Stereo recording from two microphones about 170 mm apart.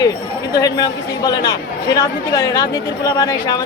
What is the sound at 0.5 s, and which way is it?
Speech, 25° left (ahead or behind).